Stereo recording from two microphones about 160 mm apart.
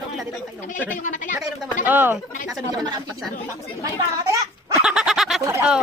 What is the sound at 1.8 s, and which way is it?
Speech, 10° right (ahead or behind).